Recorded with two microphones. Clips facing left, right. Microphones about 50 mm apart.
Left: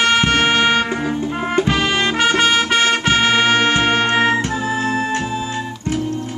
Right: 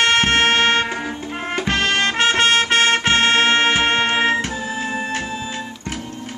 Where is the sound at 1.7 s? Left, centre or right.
Right.